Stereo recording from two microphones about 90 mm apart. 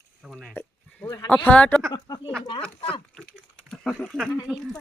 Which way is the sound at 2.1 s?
45° left (ahead or behind).